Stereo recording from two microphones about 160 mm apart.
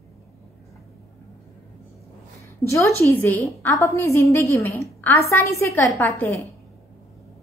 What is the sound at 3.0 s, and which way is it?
A woman's voice, 15° left (ahead or behind).